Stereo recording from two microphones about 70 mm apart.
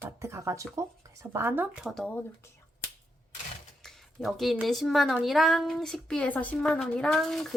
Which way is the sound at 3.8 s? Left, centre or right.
Centre.